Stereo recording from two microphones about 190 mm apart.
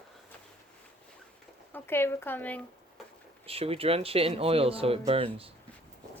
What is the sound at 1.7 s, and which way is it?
Speech, 10° left (ahead or behind).